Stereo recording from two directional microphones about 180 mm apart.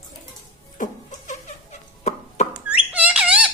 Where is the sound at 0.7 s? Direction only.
45° left (ahead or behind).